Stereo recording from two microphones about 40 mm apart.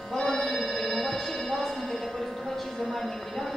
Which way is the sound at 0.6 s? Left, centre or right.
Centre.